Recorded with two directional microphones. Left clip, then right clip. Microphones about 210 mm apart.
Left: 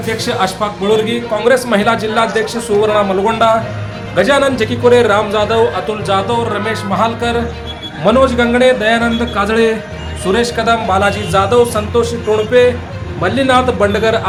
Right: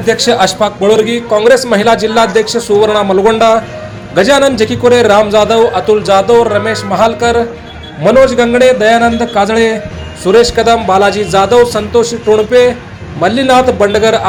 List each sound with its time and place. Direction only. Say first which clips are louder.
0.1 s a man's voice: right 7 dB; 25° right (ahead or behind)